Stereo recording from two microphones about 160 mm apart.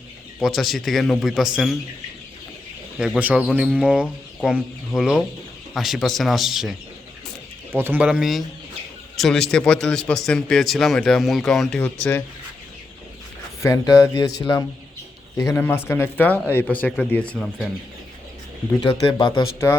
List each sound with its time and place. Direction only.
0.3 s a man's voice: centre (ahead or behind)
3.0 s a man's voice: 5° right (ahead or behind)
7.7 s a man's voice: 15° right (ahead or behind); by 12.2 s 10° left (ahead or behind)
13.6 s speech: 20° left (ahead or behind); by 17.7 s 5° left (ahead or behind)
18.8 s speech: 25° left (ahead or behind)
19.4 s speech: 15° left (ahead or behind)